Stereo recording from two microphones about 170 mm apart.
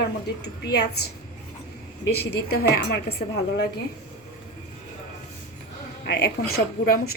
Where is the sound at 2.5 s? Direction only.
65° left (ahead or behind).